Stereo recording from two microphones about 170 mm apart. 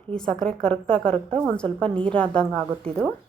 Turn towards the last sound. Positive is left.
turn(degrees=5)  # may be behind; listen again after turning